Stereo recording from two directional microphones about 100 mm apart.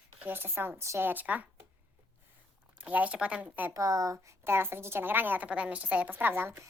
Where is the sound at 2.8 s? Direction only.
15° right (ahead or behind).